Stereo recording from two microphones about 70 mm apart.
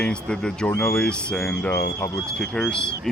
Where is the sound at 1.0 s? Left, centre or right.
Centre.